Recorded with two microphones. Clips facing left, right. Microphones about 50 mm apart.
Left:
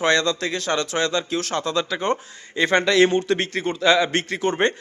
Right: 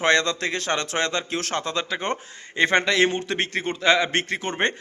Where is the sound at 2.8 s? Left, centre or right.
Centre.